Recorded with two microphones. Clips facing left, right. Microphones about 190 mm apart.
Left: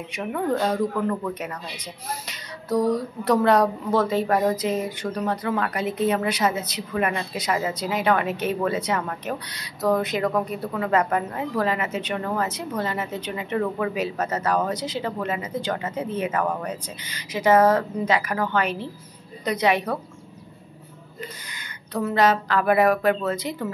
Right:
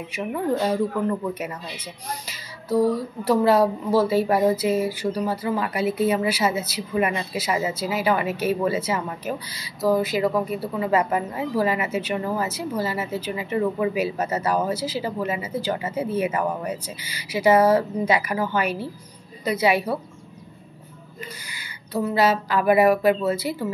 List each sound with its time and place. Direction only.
0.1 s speech: 5° right (ahead or behind)
21.5 s speech: 10° right (ahead or behind)